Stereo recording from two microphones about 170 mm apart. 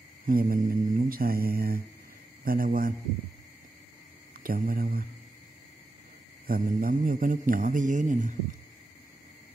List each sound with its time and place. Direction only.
0.3 s mantra: 55° right (ahead or behind)
4.4 s mantra: 55° right (ahead or behind)
6.4 s a man's voice: 55° right (ahead or behind)